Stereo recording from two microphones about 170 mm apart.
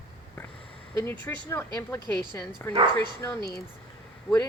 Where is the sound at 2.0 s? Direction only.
25° right (ahead or behind).